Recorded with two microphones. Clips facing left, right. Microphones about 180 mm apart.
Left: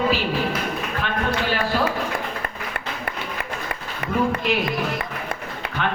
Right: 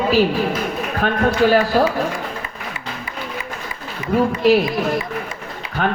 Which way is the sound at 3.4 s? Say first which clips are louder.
Left 1 dB; 60° left (ahead or behind).